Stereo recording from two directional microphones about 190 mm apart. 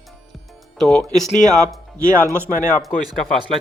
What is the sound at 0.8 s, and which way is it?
Speech, 5° left (ahead or behind).